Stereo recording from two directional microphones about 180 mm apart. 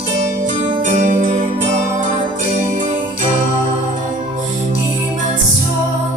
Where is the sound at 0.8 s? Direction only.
45° right (ahead or behind).